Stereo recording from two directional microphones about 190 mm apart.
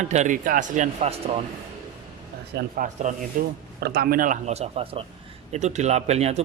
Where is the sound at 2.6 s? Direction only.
45° right (ahead or behind).